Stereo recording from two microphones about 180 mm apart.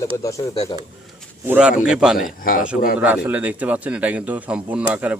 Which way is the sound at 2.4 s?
50° left (ahead or behind).